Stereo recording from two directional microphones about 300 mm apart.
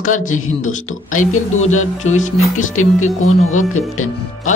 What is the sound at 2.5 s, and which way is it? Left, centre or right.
Speech, left.